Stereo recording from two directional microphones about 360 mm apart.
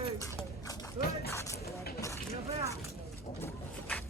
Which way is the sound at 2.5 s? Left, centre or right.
Centre.